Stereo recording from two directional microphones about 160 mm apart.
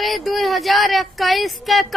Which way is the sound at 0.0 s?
Centre (ahead or behind).